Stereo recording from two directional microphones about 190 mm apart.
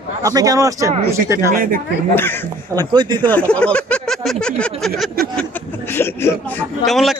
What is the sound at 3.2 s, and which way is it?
Speech, 5° left (ahead or behind).